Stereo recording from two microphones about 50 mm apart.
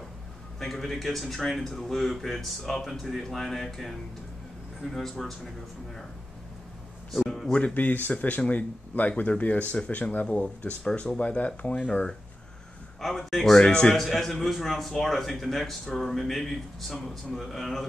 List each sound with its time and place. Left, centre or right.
0.6 s a man's voice: centre
7.1 s a man's voice: centre
7.5 s speech: left
13.0 s a man's voice: centre
13.9 s a man's voice: centre